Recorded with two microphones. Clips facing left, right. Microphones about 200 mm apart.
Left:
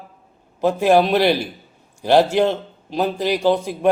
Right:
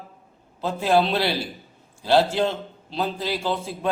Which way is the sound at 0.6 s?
15° left (ahead or behind).